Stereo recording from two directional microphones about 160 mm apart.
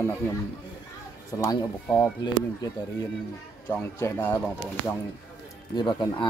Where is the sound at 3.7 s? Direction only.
15° left (ahead or behind).